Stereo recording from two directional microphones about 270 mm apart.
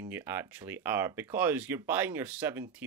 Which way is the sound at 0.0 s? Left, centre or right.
Centre.